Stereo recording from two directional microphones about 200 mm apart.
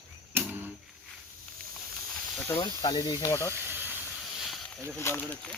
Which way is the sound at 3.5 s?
10° right (ahead or behind).